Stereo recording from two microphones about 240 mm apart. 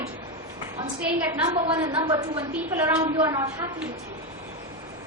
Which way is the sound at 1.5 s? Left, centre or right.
Right.